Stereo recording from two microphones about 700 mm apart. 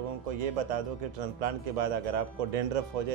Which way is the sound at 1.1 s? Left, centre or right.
Right.